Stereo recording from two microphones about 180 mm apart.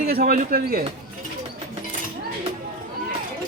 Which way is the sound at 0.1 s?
55° right (ahead or behind).